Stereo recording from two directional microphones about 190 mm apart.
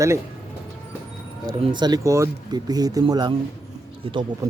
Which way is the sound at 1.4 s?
20° right (ahead or behind).